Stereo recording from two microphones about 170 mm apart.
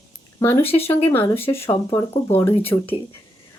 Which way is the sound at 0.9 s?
15° left (ahead or behind).